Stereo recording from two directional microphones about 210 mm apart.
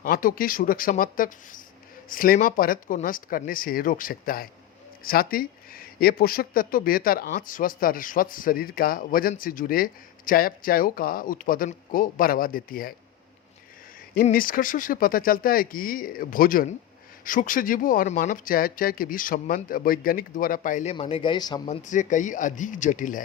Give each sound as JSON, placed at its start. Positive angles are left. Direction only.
{"t": 0.0, "sound": "speech", "side_deg": 40}
{"t": 14.2, "sound": "speech", "side_deg": 40}
{"t": 20.9, "sound": "speech", "side_deg": 25}
{"t": 21.7, "sound": "speech", "side_deg": 35}